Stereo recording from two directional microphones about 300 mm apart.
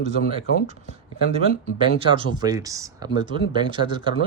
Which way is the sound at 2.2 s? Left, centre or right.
Centre.